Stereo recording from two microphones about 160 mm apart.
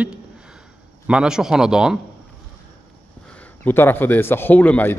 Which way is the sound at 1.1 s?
5° right (ahead or behind).